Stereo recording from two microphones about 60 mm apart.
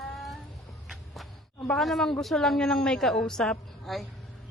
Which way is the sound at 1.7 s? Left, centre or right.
Centre.